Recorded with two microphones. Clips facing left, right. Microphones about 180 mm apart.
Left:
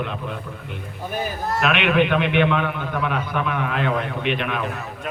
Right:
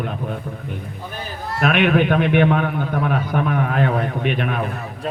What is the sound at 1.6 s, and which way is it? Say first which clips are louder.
A man's voice: right 3 dB; 45° right (ahead or behind).